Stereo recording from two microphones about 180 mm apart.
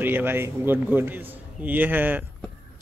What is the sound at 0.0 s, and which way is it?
A man's voice, 10° right (ahead or behind).